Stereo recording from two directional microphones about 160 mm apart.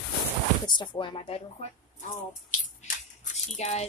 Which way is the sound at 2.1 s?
55° left (ahead or behind).